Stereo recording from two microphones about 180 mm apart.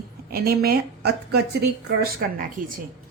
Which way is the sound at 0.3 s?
60° right (ahead or behind).